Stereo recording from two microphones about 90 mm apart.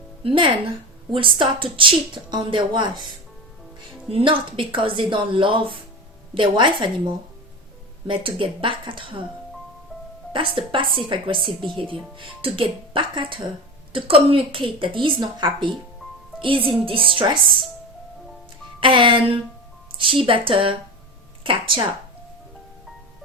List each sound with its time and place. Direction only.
0.2 s speech: 80° right; by 3.0 s 60° right (ahead or behind)
4.1 s speech: 75° right (ahead or behind)
8.0 s speech: 80° right
10.3 s speech: 75° right (ahead or behind)
12.1 s speech: 80° right
13.9 s speech: 80° right; by 15.7 s 65° right (ahead or behind)
16.4 s speech: 80° right
18.8 s speech: 70° right (ahead or behind)